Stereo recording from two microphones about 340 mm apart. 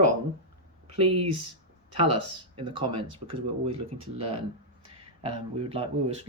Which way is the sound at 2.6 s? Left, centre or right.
Centre.